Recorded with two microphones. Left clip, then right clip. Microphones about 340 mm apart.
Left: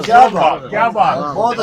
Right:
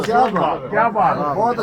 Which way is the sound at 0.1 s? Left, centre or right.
Left.